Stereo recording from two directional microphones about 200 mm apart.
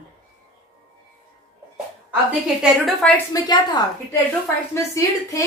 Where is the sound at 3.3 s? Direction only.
20° left (ahead or behind).